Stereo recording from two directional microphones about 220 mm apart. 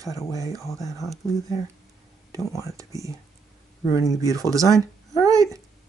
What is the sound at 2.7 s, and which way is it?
Speech, 15° right (ahead or behind).